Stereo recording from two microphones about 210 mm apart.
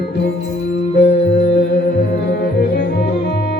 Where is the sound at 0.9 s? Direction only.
55° left (ahead or behind).